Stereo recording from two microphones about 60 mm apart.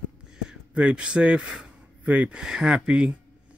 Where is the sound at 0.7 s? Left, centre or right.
Centre.